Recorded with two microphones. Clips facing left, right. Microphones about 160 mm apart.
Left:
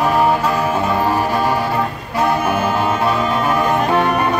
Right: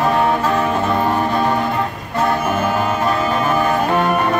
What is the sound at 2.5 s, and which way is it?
Music, 10° left (ahead or behind).